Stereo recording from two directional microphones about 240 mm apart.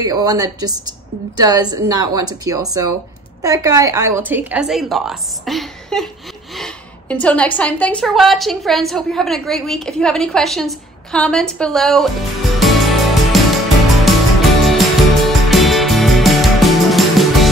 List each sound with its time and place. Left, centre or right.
0.0 s a woman's voice: centre
12.5 s music: centre